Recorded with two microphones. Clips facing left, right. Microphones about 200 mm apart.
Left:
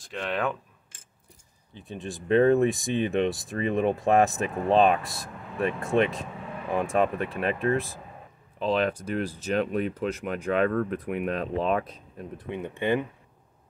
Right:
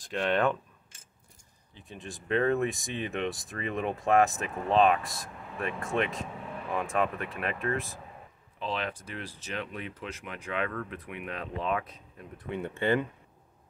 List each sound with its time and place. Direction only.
0.0 s speech: centre (ahead or behind)
1.9 s speech: 30° left (ahead or behind)
12.4 s speech: 20° left (ahead or behind)